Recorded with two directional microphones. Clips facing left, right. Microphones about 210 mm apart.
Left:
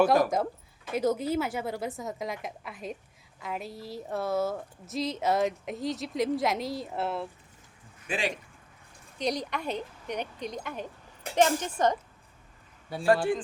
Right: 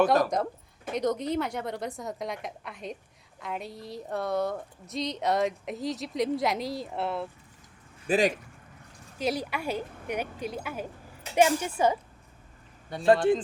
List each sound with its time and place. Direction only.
0.0 s speech: centre (ahead or behind)
8.0 s speech: 40° right (ahead or behind)
9.1 s speech: 5° right (ahead or behind)
12.9 s speech: 5° left (ahead or behind)